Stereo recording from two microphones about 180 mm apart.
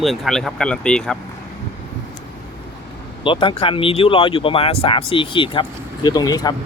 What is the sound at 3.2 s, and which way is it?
Speech, 30° left (ahead or behind).